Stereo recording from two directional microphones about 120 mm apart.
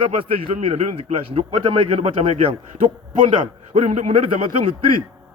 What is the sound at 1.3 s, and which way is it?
A man's voice, 55° right (ahead or behind).